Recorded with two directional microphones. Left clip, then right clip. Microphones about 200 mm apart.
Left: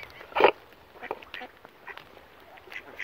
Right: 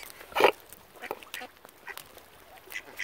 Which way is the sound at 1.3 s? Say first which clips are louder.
Even; 50° right (ahead or behind).